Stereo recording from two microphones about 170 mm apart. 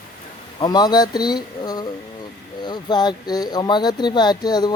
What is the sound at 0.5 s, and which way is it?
Speech, 25° left (ahead or behind).